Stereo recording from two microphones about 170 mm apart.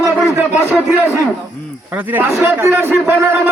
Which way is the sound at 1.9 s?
10° right (ahead or behind).